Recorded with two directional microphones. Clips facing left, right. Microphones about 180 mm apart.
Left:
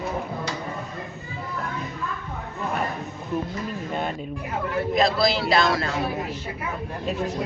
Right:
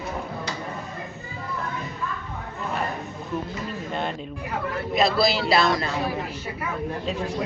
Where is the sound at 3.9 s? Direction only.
5° left (ahead or behind).